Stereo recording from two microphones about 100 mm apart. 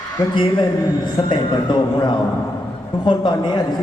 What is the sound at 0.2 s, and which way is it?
A man's voice, 45° left (ahead or behind).